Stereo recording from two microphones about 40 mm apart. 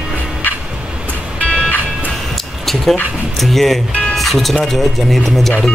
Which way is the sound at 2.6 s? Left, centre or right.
Centre.